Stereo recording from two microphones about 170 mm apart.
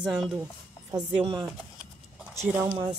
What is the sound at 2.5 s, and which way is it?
Speech, 10° right (ahead or behind).